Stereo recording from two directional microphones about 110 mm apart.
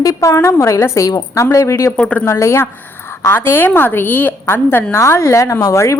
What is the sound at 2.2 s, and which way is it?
A woman's voice, 25° left (ahead or behind).